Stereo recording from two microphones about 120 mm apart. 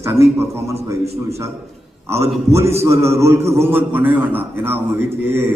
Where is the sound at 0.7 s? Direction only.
60° right (ahead or behind).